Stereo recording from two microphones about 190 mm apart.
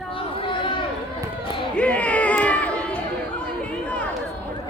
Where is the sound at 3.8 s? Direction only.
5° left (ahead or behind).